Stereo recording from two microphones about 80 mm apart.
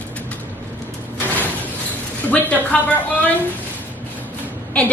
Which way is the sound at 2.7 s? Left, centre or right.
Centre.